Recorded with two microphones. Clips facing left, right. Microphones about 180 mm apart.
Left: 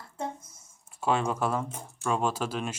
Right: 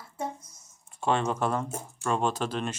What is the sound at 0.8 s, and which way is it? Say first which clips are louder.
Speech: even; 5° left (ahead or behind).